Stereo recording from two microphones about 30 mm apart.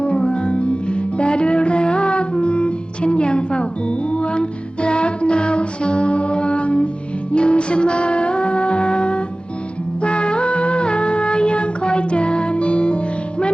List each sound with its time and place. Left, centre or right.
0.0 s music: left